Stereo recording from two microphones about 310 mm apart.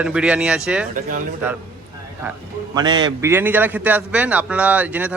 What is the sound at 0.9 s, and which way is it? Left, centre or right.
Speech, right.